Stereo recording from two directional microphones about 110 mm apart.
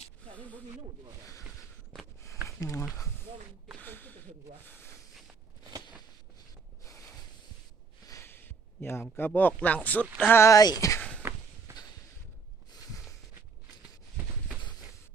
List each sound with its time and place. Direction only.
0.3 s speech: 15° left (ahead or behind)
1.9 s walk: 5° left (ahead or behind)
2.5 s speech: 30° left (ahead or behind)
3.8 s snake: 15° left (ahead or behind)
4.6 s a sound: 20° left (ahead or behind)
6.8 s snort: 30° left (ahead or behind)
8.0 s speech: 25° left (ahead or behind)
11.2 s walk: 20° right (ahead or behind)